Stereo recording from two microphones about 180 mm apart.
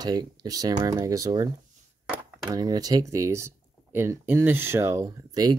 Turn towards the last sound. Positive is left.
turn(degrees=-20)  # may be behind; listen again after turning